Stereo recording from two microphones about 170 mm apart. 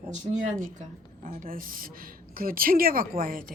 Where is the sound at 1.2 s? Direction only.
55° right (ahead or behind).